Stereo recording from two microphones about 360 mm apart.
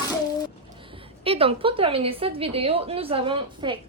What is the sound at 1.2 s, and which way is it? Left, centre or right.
A woman's voice, centre.